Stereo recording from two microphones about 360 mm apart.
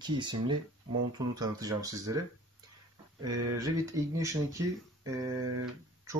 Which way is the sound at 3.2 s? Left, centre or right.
Centre.